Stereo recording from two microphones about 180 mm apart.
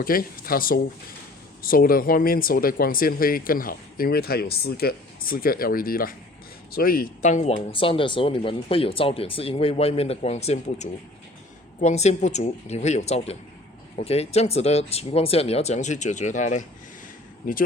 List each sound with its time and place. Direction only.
0.0 s speech: 55° left (ahead or behind)
7.7 s speech: 30° left (ahead or behind)